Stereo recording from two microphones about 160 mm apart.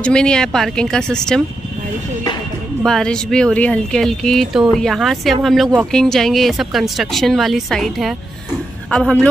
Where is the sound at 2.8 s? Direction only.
5° left (ahead or behind).